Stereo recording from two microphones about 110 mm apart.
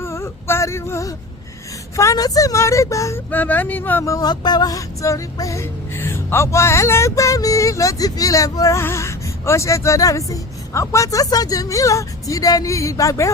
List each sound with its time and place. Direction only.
0.0 s a sound: 25° left (ahead or behind)
2.0 s vehicle: 30° left (ahead or behind)
3.3 s speech: 15° left (ahead or behind)
4.0 s vehicle: 35° left (ahead or behind)